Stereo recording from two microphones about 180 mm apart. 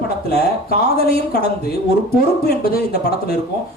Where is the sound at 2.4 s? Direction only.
60° left (ahead or behind).